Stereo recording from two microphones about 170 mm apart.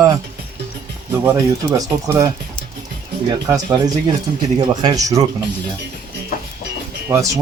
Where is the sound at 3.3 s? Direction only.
20° right (ahead or behind).